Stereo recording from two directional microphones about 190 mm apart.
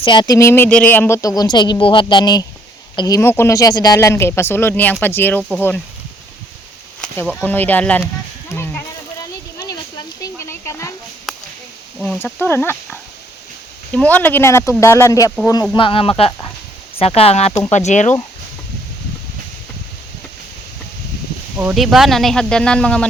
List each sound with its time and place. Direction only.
0.0 s speech: 25° left (ahead or behind); by 5.8 s 10° left (ahead or behind)
7.3 s speech: 5° left (ahead or behind)
8.5 s a sound: 10° left (ahead or behind)
11.3 s whip: centre (ahead or behind)
11.9 s speech: centre (ahead or behind)
12.2 s speech: 10° left (ahead or behind)
15.7 s speech: 25° left (ahead or behind)
21.6 s speech: 5° right (ahead or behind)